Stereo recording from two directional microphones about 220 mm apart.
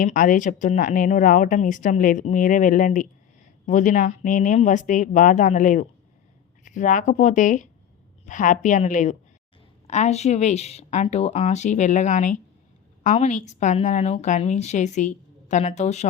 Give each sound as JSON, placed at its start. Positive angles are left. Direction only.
{"t": 0.0, "sound": "speech", "side_deg": 35}